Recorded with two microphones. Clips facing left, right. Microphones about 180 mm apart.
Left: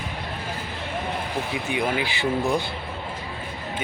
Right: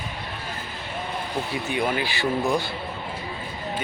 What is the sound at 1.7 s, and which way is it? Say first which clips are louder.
Speech: even; 15° left (ahead or behind).